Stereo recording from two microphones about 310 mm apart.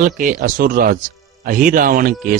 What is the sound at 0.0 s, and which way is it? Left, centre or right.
Speech, right.